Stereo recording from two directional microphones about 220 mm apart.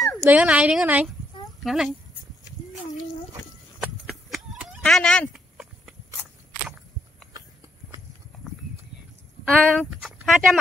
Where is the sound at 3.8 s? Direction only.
Centre (ahead or behind).